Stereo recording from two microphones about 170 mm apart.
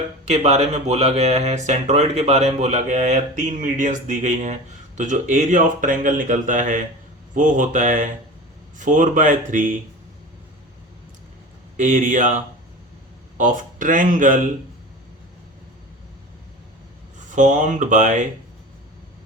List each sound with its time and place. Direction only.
0.3 s speech: 40° right (ahead or behind)
11.8 s speech: 50° right (ahead or behind)
17.2 s speech: 45° right (ahead or behind)